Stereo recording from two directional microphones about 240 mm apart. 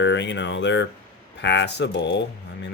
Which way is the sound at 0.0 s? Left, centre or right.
Left.